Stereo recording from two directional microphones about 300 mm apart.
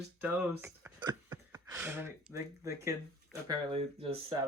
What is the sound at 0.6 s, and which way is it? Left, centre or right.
Speech, centre.